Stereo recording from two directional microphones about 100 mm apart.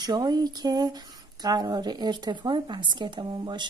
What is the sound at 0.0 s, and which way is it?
Speech, 45° right (ahead or behind).